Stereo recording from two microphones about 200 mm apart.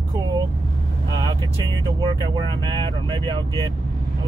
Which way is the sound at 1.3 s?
20° right (ahead or behind).